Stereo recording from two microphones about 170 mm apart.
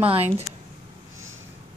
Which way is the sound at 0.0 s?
35° right (ahead or behind).